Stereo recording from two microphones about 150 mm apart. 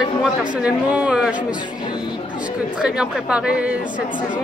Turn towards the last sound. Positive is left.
turn(degrees=-5)  # may be behind; listen again after turning